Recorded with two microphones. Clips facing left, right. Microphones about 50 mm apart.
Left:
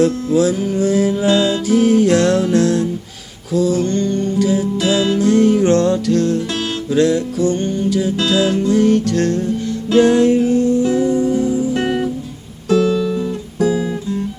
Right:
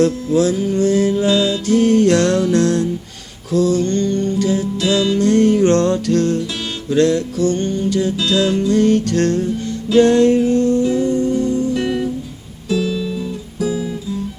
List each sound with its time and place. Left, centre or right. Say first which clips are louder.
0.0 s music: left 1 dB; centre
7.9 s music: left 2 dB; centre
11.7 s music: left 1 dB; left
12.7 s music: left 5 dB; left
13.6 s guitar: left 4 dB; left